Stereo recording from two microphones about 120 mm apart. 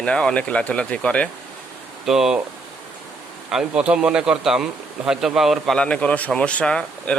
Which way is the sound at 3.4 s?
5° right (ahead or behind).